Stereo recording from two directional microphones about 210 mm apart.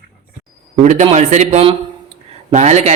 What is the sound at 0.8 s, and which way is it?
A man's voice, 35° right (ahead or behind).